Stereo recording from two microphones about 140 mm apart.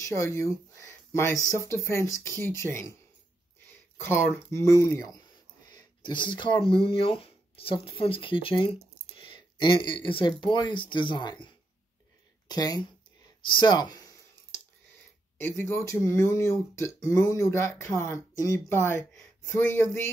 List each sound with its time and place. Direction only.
0.0 s speech: 20° left (ahead or behind)
4.0 s speech: 15° left (ahead or behind)
5.7 s a sound: 30° left (ahead or behind)
6.7 s speech: 40° left (ahead or behind)
13.5 s a sound: 30° left (ahead or behind)
15.3 s speech: 15° left (ahead or behind)